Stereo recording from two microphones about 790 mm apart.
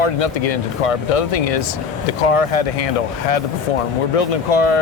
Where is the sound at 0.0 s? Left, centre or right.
Left.